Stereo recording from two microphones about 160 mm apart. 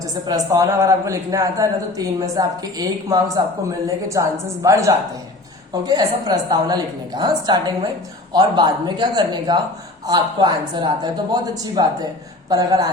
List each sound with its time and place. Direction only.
0.0 s a woman's voice: 20° right (ahead or behind)